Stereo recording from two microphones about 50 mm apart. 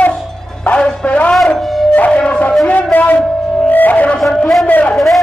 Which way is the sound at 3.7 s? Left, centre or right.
Left.